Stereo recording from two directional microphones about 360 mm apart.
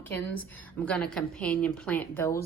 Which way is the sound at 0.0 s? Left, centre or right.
Centre.